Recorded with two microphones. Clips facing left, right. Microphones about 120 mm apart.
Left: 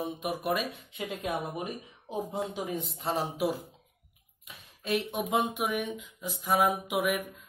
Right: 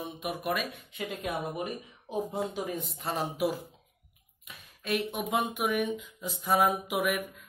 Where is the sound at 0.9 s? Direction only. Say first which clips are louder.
Left 1 dB; 15° left (ahead or behind).